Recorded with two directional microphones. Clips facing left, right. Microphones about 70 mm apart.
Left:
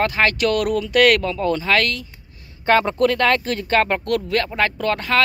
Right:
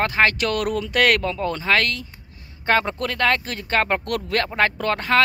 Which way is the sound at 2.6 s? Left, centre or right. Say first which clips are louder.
Left 5 dB; centre.